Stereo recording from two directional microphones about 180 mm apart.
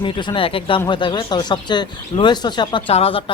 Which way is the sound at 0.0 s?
25° left (ahead or behind).